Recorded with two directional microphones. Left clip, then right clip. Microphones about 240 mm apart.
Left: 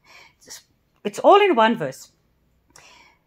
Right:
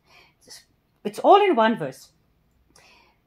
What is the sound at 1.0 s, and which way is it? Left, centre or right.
Speech, left.